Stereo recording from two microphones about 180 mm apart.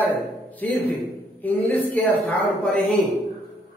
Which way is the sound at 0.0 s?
10° left (ahead or behind).